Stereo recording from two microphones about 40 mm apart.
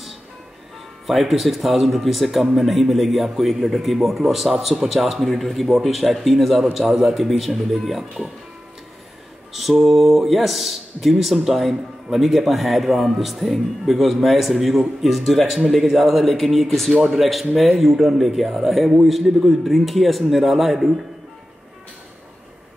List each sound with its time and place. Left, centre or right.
1.0 s a man's voice: centre
9.5 s a man's voice: centre